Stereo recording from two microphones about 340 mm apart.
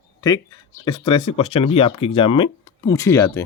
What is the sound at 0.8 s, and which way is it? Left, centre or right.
Speech, centre.